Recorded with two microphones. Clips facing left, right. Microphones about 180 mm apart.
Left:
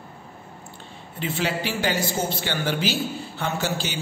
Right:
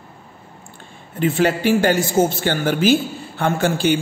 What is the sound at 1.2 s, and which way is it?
A man's voice, 50° right (ahead or behind).